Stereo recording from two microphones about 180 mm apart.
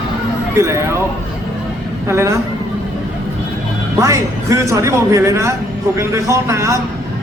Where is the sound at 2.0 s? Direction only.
15° right (ahead or behind).